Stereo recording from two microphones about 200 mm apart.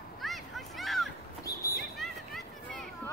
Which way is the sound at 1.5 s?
15° left (ahead or behind).